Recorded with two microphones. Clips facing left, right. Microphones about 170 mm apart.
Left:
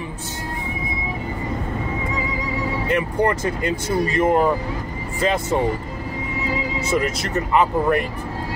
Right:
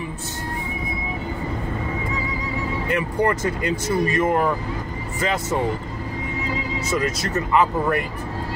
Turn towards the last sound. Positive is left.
turn(degrees=25)  # may be behind; listen again after turning